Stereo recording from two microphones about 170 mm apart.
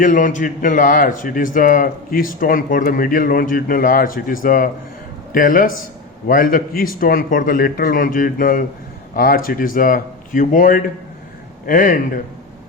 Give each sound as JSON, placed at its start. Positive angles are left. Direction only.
{"t": 0.0, "sound": "a man's voice", "side_deg": 50}